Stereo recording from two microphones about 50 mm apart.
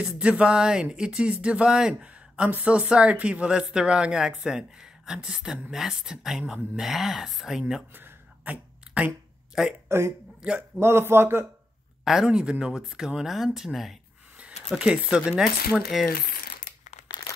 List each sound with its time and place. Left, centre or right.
0.0 s a woman's voice: right; by 7.6 s centre
8.5 s a sound: right
9.8 s speech: right
12.0 s a woman's voice: centre
14.7 s a woman's voice: centre
15.9 s speech: centre